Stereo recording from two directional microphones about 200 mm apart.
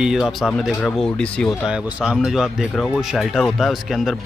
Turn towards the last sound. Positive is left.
turn(degrees=0)  # may be behind; listen again after turning